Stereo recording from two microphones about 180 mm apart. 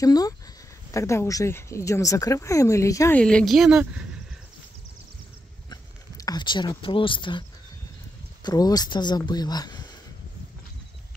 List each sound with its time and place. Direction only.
0.0 s speech: 20° left (ahead or behind)
3.2 s speech: 5° left (ahead or behind)
5.7 s speech: 20° left (ahead or behind)
8.5 s speech: 20° left (ahead or behind)